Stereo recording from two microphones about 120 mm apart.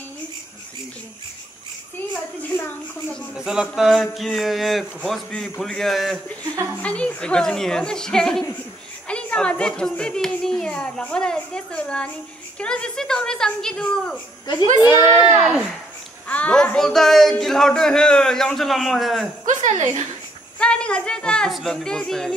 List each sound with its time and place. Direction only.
3.3 s speech: 5° right (ahead or behind)
6.4 s a woman's voice: 30° right (ahead or behind)
6.8 s a child's voice: 10° left (ahead or behind)
14.4 s a child's voice: 35° left (ahead or behind)
15.4 s speech: 5° right (ahead or behind)
16.3 s speech: 10° left (ahead or behind)
19.5 s a woman's voice: 90° right
20.5 s a child's voice: 10° left (ahead or behind)